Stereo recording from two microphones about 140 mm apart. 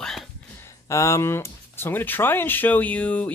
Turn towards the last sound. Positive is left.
turn(degrees=10)  # may be behind; listen again after turning